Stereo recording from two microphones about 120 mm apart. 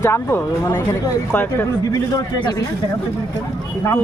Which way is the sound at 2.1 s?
35° left (ahead or behind).